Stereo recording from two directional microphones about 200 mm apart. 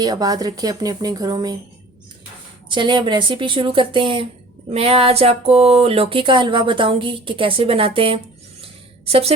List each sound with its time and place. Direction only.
0.0 s speech: 20° right (ahead or behind)
2.6 s speech: 25° right (ahead or behind)
8.6 s a sound: 30° right (ahead or behind)